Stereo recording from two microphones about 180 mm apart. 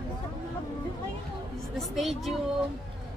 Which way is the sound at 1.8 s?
Centre (ahead or behind).